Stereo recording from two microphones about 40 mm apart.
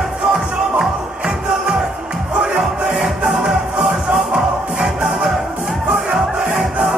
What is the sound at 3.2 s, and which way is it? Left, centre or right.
Music, right.